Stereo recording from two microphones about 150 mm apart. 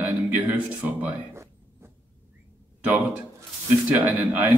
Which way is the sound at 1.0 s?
20° right (ahead or behind).